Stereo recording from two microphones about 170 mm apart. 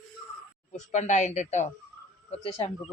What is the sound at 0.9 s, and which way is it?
A woman's voice, 45° left (ahead or behind).